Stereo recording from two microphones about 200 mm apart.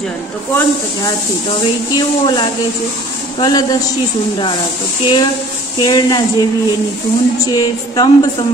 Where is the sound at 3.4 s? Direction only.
20° left (ahead or behind).